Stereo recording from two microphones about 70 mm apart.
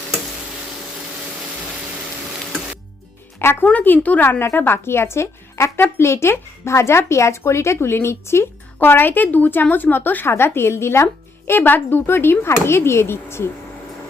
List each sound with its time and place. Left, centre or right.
3.3 s speech: left
3.7 s speech: left